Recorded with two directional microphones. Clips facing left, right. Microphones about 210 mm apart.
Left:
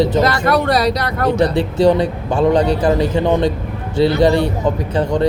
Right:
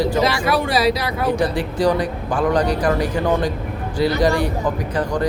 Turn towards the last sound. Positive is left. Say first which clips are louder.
# left 4 dB
turn(degrees=25)  # may be behind; listen again after turning